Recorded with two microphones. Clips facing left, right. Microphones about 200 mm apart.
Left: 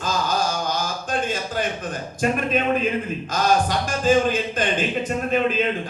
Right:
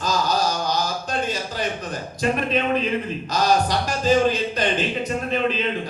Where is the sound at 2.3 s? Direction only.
45° left (ahead or behind).